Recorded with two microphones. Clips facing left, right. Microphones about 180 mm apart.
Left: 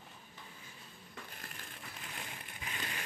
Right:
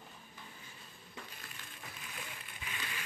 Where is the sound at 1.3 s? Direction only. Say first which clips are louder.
Left 2 dB; 50° left (ahead or behind).